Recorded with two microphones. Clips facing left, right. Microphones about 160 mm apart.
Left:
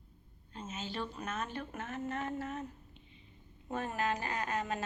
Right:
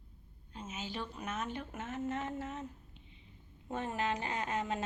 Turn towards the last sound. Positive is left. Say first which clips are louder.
# even
turn(degrees=-25)  # may be behind; listen again after turning